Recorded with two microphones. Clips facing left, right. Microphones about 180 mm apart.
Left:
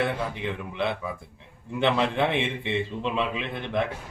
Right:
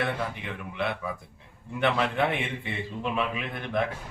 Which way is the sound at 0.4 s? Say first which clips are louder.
Left 3 dB; 25° left (ahead or behind).